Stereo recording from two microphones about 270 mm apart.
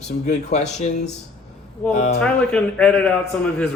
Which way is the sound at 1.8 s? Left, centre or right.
Centre.